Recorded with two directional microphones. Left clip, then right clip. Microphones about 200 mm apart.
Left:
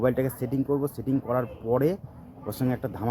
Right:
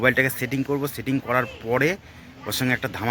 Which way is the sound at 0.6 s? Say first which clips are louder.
Right 1 dB; 15° right (ahead or behind).